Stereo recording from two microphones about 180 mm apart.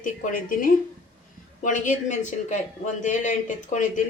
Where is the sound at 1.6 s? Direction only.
45° left (ahead or behind).